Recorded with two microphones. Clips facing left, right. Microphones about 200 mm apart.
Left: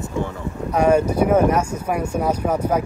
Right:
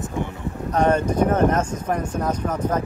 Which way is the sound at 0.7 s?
10° left (ahead or behind).